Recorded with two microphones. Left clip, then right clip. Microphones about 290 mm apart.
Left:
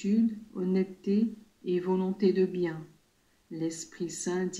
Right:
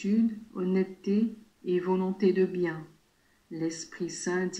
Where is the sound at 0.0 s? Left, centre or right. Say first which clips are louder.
Even; centre.